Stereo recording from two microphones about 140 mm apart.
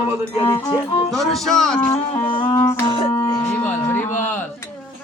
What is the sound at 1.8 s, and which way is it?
Music, 15° left (ahead or behind).